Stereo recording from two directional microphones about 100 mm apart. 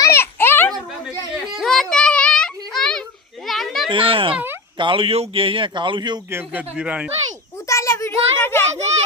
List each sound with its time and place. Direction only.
0.0 s a sound: 25° left (ahead or behind)
1.5 s a sound: 5° left (ahead or behind)
3.4 s children playing: centre (ahead or behind)
3.8 s speech: 60° right (ahead or behind)
6.3 s speech: 15° right (ahead or behind)
7.7 s child singing: 30° left (ahead or behind)